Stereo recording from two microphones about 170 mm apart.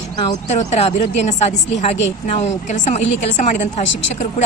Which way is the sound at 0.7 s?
40° left (ahead or behind).